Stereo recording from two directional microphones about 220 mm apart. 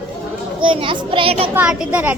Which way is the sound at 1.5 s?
5° right (ahead or behind).